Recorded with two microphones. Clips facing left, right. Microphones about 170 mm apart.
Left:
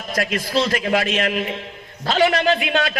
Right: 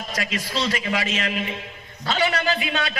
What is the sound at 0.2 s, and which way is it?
A man's voice, 50° left (ahead or behind).